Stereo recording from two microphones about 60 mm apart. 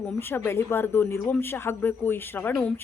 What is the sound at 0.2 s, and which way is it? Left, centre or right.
A woman's voice, left.